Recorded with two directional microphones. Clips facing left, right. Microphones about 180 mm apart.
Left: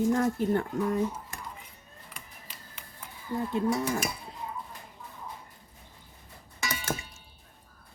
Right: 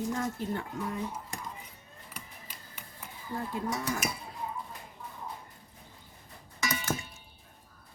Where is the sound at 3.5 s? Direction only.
25° left (ahead or behind).